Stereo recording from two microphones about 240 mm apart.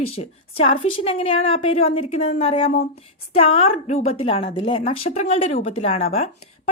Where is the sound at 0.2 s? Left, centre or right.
Left.